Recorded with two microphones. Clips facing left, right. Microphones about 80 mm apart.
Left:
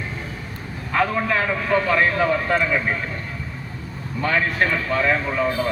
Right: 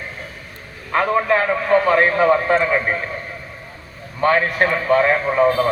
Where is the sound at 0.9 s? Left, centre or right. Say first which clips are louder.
Right 4 dB; right.